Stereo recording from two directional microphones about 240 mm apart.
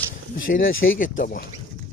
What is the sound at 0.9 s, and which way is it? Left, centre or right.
Speech, left.